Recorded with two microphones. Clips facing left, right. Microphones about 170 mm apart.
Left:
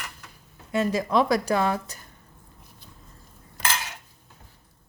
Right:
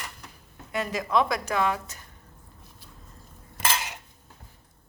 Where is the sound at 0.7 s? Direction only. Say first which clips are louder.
Left 3 dB; 30° left (ahead or behind).